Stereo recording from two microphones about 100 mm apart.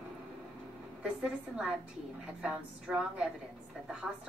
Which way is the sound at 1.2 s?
10° right (ahead or behind).